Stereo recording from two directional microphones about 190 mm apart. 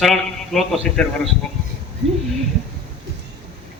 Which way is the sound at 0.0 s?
Centre (ahead or behind).